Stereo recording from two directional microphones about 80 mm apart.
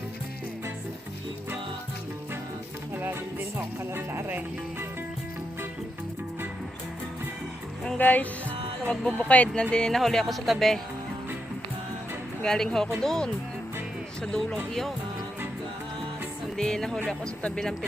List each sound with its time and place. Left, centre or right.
2.9 s music: right
3.9 s speech: right
7.9 s speech: left
9.7 s speech: centre
12.4 s speech: centre
16.6 s speech: centre